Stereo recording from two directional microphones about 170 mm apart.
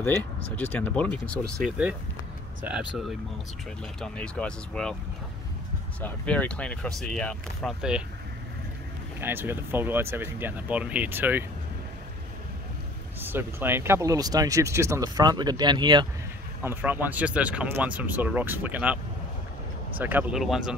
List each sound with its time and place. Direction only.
0.0 s speech: 10° left (ahead or behind)
2.6 s speech: 5° right (ahead or behind)
5.9 s speech: 10° left (ahead or behind)
9.2 s speech: 15° right (ahead or behind)
13.2 s speech: 10° right (ahead or behind)
16.6 s speech: 10° right (ahead or behind)
20.0 s speech: 10° right (ahead or behind)